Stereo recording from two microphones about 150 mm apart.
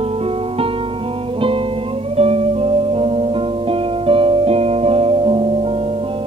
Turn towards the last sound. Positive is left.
turn(degrees=-40)  # may be behind; listen again after turning